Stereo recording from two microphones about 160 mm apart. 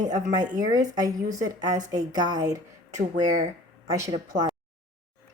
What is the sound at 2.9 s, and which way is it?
Speech, 50° right (ahead or behind).